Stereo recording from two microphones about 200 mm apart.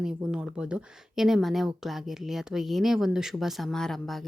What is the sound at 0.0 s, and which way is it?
Speech, 5° right (ahead or behind).